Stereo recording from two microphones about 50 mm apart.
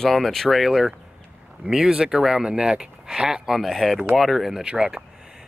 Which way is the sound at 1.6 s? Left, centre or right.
Centre.